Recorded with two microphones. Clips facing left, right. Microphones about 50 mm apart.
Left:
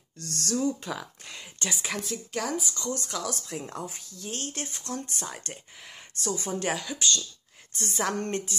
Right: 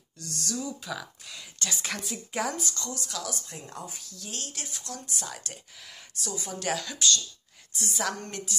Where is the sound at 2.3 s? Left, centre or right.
Centre.